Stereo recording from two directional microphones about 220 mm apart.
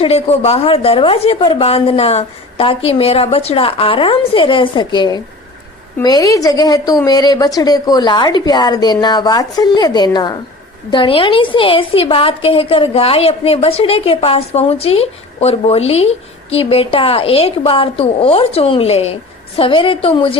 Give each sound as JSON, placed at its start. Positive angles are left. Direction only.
{"t": 0.0, "sound": "a woman's voice", "side_deg": 25}